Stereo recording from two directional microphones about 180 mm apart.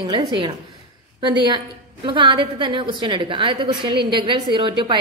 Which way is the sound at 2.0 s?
25° right (ahead or behind).